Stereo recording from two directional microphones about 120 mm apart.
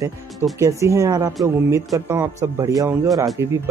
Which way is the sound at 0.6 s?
25° right (ahead or behind).